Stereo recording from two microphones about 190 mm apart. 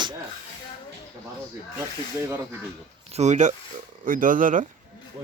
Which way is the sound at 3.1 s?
35° right (ahead or behind).